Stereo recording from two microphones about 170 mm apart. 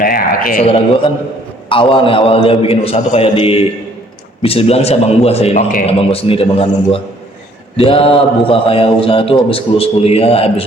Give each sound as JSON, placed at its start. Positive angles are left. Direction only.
{"t": 0.0, "sound": "a man's voice", "side_deg": 55}
{"t": 1.7, "sound": "a man's voice", "side_deg": 30}